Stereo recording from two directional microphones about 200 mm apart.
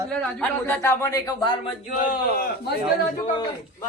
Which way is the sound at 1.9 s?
50° left (ahead or behind).